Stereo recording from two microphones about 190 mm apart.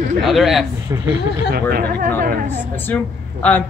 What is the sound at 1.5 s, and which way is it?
Speech, 55° right (ahead or behind).